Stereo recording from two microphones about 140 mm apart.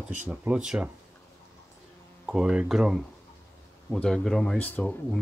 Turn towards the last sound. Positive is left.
turn(degrees=10)  # may be behind; listen again after turning